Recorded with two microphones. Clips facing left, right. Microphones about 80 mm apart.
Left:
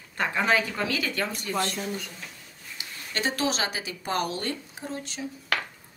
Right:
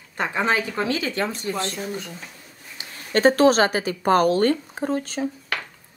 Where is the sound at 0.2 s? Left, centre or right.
Right.